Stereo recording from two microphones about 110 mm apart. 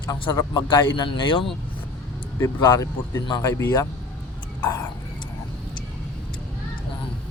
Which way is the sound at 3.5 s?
25° left (ahead or behind).